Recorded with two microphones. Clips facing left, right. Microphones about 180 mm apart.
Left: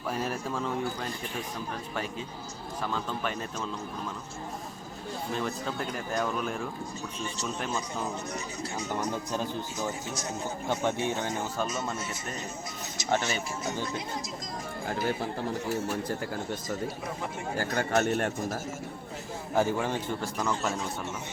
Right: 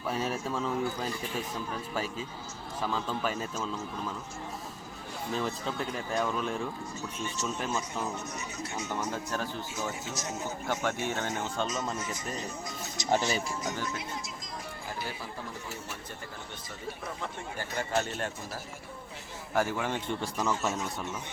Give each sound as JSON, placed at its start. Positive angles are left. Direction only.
{"t": 0.1, "sound": "speech", "side_deg": 0}
{"t": 2.8, "sound": "speech", "side_deg": -5}
{"t": 5.3, "sound": "speech", "side_deg": 0}
{"t": 7.6, "sound": "speech", "side_deg": 0}
{"t": 8.9, "sound": "speech", "side_deg": 15}
{"t": 13.1, "sound": "speech", "side_deg": -15}
{"t": 14.8, "sound": "speech", "side_deg": 55}
{"t": 17.6, "sound": "speech", "side_deg": 70}
{"t": 19.5, "sound": "speech", "side_deg": 15}
{"t": 20.4, "sound": "speech", "side_deg": -5}